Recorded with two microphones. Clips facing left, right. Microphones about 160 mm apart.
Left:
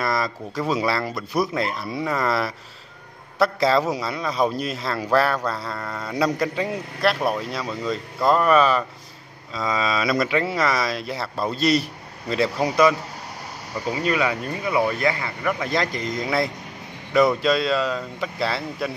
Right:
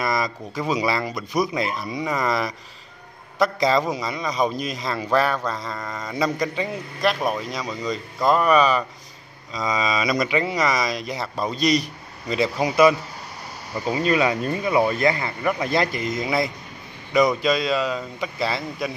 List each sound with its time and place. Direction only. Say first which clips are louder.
0.0 s speech: even; centre (ahead or behind)
13.9 s speech: right 3 dB; 25° right (ahead or behind)
16.0 s speech: even; centre (ahead or behind)